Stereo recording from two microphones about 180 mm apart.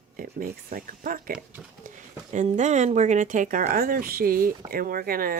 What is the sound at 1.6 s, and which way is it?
Speech, 5° right (ahead or behind).